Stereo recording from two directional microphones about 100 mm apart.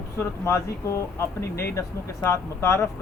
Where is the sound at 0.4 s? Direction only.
30° left (ahead or behind).